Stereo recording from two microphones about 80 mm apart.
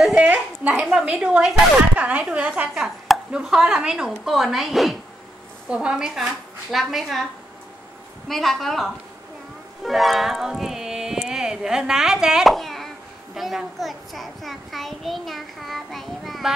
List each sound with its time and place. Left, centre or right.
0.0 s a sound: centre
0.3 s a woman's voice: centre
8.3 s a woman's voice: centre